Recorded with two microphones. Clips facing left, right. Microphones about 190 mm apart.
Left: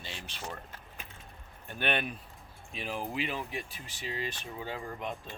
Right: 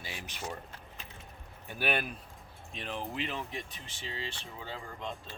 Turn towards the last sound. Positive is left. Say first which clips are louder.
# left 3 dB
turn(degrees=15)  # may be behind; listen again after turning